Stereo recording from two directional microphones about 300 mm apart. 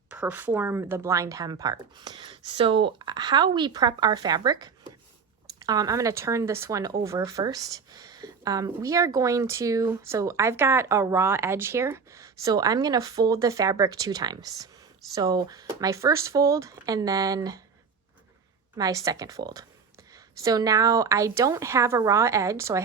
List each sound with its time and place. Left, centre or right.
0.1 s speech: centre
18.8 s speech: centre